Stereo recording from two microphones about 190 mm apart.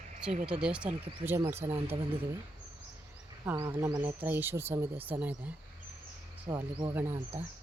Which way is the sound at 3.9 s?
10° right (ahead or behind).